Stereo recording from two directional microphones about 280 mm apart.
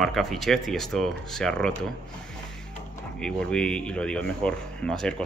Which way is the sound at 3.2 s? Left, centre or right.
Centre.